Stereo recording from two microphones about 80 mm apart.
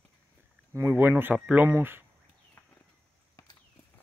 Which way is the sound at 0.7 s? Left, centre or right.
Right.